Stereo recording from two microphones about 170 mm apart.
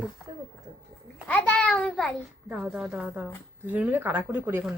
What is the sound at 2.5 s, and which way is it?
Speech, 5° right (ahead or behind).